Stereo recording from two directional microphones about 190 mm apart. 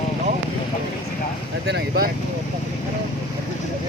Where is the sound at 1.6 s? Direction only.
55° right (ahead or behind).